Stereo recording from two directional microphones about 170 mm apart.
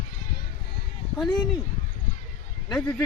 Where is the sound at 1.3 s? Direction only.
25° left (ahead or behind).